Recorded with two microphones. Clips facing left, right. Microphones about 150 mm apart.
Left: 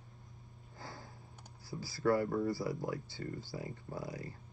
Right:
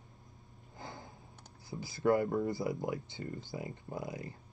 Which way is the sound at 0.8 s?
20° right (ahead or behind).